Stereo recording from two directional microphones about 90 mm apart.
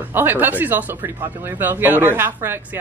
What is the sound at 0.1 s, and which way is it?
Speech, 20° right (ahead or behind).